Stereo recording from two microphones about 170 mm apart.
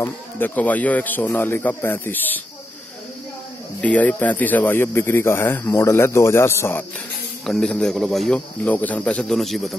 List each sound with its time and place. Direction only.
0.0 s speech: 10° left (ahead or behind)
3.8 s speech: 10° left (ahead or behind)
7.4 s a man's voice: 5° left (ahead or behind)